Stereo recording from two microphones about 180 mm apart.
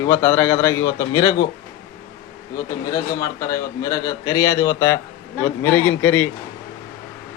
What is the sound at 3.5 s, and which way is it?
A man's voice, 20° left (ahead or behind).